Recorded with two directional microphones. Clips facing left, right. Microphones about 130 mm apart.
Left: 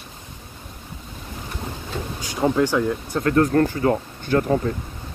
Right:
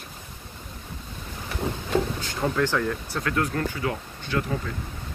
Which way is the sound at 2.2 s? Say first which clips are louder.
Left 5 dB; 15° left (ahead or behind).